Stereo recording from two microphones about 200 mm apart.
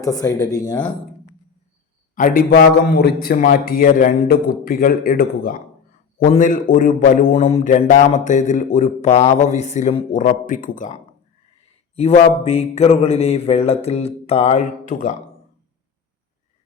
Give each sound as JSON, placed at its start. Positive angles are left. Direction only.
{"t": 0.0, "sound": "speech", "side_deg": 15}
{"t": 2.1, "sound": "a man's voice", "side_deg": 45}